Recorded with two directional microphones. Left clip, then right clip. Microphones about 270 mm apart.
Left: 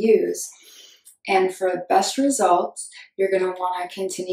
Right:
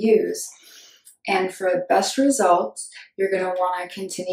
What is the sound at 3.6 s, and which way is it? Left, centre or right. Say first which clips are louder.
Speech: right 2 dB; left.